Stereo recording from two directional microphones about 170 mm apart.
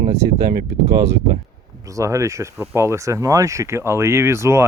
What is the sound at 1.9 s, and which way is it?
Speech, 20° right (ahead or behind).